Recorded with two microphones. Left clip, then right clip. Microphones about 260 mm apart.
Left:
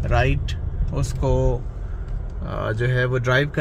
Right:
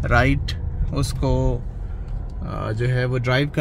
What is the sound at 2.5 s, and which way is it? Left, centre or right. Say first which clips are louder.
Speech: left 2 dB; centre.